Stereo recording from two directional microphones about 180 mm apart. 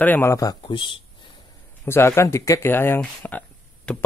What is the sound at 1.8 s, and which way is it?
Speech, 15° left (ahead or behind).